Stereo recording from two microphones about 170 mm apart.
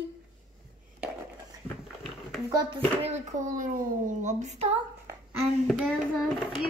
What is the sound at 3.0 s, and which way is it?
A woman's voice, 50° right (ahead or behind).